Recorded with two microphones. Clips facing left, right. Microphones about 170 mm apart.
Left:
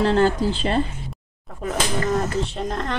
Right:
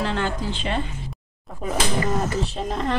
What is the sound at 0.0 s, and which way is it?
Speech, 35° left (ahead or behind).